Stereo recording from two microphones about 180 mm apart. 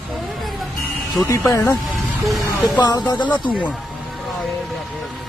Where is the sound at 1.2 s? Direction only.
15° left (ahead or behind).